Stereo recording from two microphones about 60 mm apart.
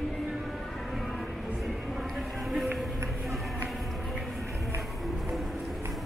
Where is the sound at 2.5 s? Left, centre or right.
Centre.